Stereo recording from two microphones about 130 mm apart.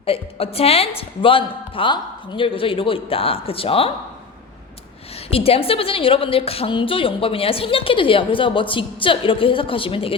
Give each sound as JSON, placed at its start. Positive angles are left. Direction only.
{"t": 0.0, "sound": "a woman's voice", "side_deg": 45}
{"t": 5.3, "sound": "a woman's voice", "side_deg": 50}